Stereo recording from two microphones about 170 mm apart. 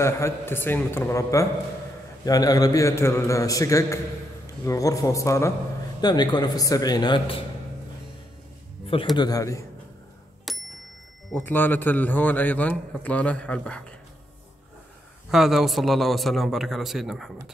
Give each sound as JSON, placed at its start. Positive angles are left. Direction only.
{"t": 0.0, "sound": "a man's voice", "side_deg": 15}
{"t": 9.1, "sound": "a man's voice", "side_deg": 25}
{"t": 10.5, "sound": "bicycle bell", "side_deg": 0}
{"t": 11.3, "sound": "a man's voice", "side_deg": 10}
{"t": 15.3, "sound": "a man's voice", "side_deg": 0}